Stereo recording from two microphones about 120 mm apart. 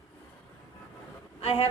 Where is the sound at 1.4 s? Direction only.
55° left (ahead or behind).